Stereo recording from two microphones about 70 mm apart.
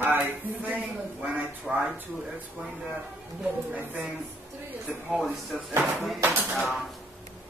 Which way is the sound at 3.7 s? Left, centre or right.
Centre.